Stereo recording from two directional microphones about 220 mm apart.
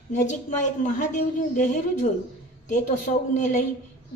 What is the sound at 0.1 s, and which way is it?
A woman's voice, 35° left (ahead or behind).